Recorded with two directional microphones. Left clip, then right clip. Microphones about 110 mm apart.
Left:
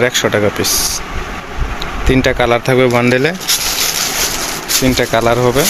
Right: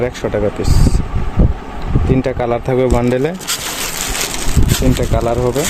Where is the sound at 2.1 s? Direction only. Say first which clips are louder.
Left 5 dB; 5° right (ahead or behind).